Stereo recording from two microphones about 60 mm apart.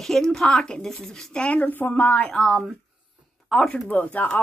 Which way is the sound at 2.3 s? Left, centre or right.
Centre.